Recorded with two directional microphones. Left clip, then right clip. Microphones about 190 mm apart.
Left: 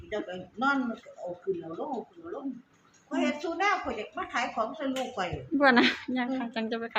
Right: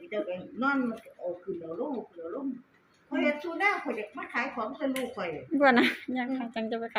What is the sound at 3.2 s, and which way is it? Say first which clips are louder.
A child's voice: right 1 dB; 25° left (ahead or behind).